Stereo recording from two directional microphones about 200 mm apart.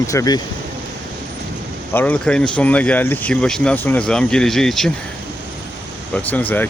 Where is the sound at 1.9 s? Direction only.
10° left (ahead or behind).